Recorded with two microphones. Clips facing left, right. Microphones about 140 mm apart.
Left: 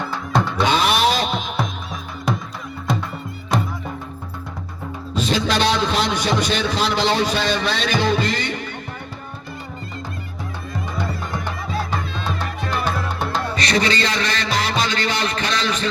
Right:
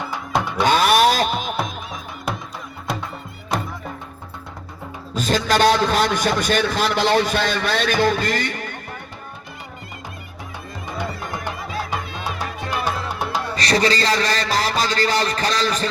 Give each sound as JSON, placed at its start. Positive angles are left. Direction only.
{"t": 0.0, "sound": "music", "side_deg": -15}
{"t": 0.7, "sound": "a sound", "side_deg": -45}
{"t": 1.5, "sound": "music", "side_deg": -10}
{"t": 5.1, "sound": "a man's voice", "side_deg": -45}
{"t": 10.9, "sound": "music", "side_deg": -15}
{"t": 13.6, "sound": "a man's voice", "side_deg": -35}
{"t": 14.5, "sound": "music", "side_deg": -40}